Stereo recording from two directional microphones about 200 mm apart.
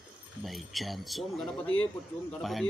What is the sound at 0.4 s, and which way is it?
Speech, centre (ahead or behind).